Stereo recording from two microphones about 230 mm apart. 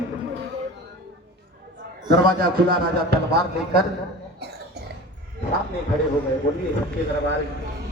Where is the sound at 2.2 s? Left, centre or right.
Right.